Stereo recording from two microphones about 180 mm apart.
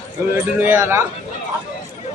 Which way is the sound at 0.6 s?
10° right (ahead or behind).